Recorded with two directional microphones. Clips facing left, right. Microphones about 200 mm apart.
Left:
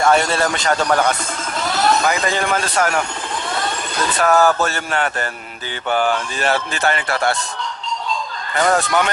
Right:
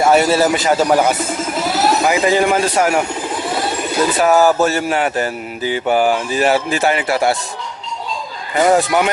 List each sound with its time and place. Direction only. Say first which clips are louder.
0.0 s speech: right 4 dB; 5° right (ahead or behind)
3.5 s bird: right 5 dB; 10° right (ahead or behind)
4.6 s speech: right 5 dB; 5° right (ahead or behind)
8.5 s speech: right 4 dB; 10° right (ahead or behind)